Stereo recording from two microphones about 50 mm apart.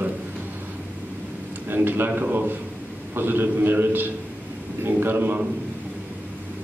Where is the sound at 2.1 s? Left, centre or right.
Right.